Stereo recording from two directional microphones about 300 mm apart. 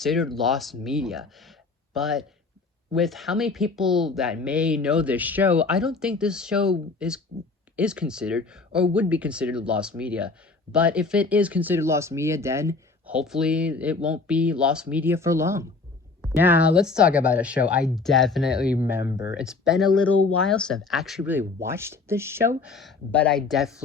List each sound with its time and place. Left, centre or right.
0.0 s speech: centre
19.1 s speech: left
19.4 s speech: centre